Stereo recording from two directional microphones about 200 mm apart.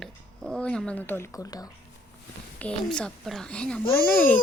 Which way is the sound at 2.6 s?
5° left (ahead or behind).